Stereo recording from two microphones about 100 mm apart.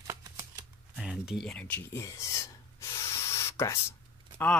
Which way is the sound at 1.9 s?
30° left (ahead or behind).